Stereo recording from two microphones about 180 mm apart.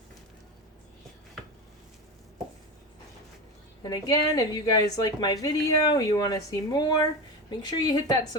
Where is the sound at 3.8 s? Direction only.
20° left (ahead or behind).